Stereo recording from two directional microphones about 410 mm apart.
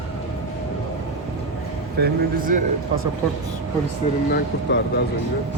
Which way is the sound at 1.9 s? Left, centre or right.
Right.